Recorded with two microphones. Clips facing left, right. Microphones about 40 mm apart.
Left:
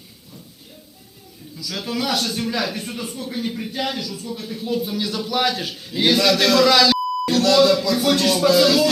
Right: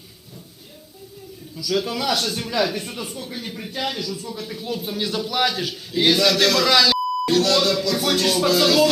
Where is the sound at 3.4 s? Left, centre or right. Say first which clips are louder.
Left 10 dB; centre.